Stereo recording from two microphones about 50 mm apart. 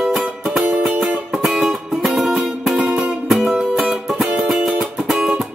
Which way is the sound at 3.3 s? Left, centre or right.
Centre.